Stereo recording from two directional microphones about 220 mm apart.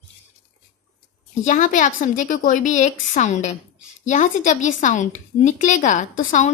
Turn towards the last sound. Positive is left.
turn(degrees=35)  # may be behind; listen again after turning